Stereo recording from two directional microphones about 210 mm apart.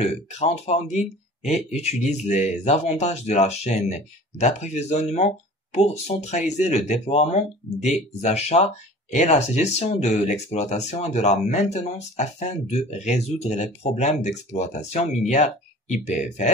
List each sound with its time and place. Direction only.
0.0 s speech: 30° left (ahead or behind)